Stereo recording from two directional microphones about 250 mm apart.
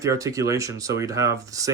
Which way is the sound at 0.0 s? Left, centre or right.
Centre.